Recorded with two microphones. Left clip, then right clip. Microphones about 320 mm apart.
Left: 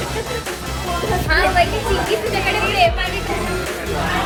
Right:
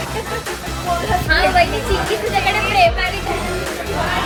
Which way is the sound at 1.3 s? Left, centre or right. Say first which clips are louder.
Right 1 dB; right.